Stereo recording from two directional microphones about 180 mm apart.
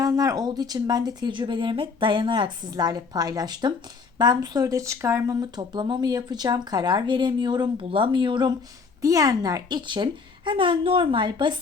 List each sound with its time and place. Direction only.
0.0 s speech: 20° right (ahead or behind)